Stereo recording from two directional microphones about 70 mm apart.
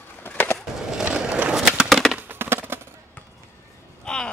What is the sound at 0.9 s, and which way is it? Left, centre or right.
Skateboard, centre.